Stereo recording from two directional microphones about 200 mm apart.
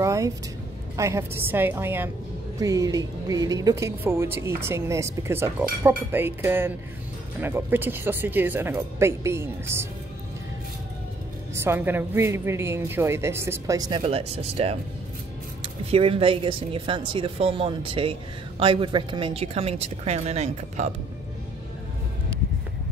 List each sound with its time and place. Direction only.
0.0 s music: 15° right (ahead or behind)
0.9 s speech: 15° right (ahead or behind)
11.6 s speech: 10° right (ahead or behind); by 14.8 s 30° right (ahead or behind)
15.9 s a woman's voice: 30° right (ahead or behind)